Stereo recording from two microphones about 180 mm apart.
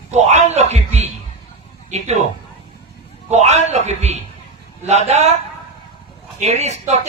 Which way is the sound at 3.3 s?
35° right (ahead or behind).